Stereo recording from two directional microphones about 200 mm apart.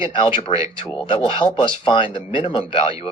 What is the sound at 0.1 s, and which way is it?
Speech, 25° left (ahead or behind).